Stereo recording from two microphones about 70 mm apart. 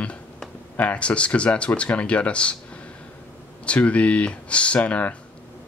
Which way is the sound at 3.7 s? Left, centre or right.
Centre.